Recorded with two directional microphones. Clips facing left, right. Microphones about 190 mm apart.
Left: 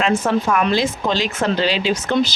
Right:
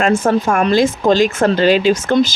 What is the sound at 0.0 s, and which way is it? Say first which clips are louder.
Speech: right 4 dB; 50° right (ahead or behind).